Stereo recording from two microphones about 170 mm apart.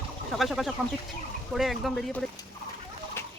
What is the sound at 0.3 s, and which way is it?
Speech, centre (ahead or behind).